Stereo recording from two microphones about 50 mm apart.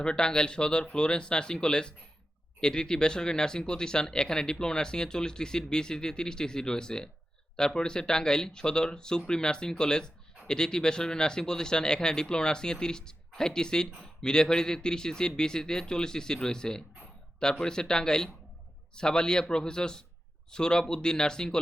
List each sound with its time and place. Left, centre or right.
0.0 s speech: centre